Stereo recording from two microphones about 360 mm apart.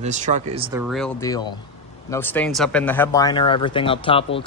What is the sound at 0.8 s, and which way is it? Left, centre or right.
Speech, centre.